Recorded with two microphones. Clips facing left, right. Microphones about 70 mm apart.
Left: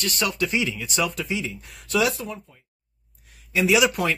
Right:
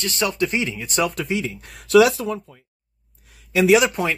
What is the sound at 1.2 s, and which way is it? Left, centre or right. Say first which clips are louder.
Speech: right 4 dB; right.